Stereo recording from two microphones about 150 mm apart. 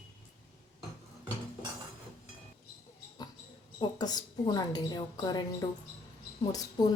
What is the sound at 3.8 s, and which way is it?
A woman's voice, 25° left (ahead or behind).